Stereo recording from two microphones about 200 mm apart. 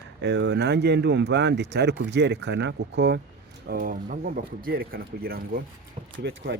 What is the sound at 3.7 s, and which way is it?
Speech, 45° right (ahead or behind).